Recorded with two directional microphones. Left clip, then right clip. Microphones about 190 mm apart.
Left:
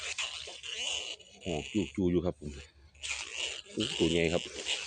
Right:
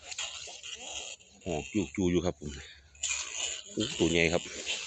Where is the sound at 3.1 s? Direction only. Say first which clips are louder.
Right 1 dB; 20° left (ahead or behind).